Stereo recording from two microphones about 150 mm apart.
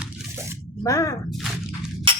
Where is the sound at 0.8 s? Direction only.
20° left (ahead or behind).